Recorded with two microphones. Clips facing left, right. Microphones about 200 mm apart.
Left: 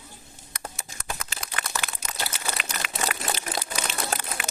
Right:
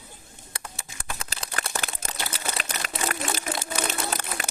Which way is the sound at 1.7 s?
50° right (ahead or behind).